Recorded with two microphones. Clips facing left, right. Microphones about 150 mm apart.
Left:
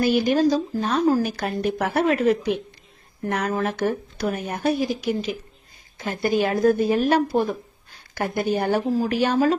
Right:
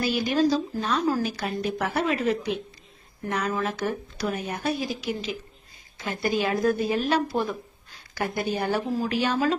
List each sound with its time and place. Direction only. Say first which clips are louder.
0.0 s speech: left 4 dB; 50° left (ahead or behind)
3.5 s speech: left 4 dB; 45° left (ahead or behind)